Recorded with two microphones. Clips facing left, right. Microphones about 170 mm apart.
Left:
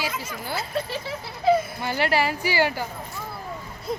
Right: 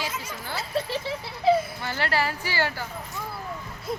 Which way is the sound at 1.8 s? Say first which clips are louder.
Left 4 dB; 15° left (ahead or behind).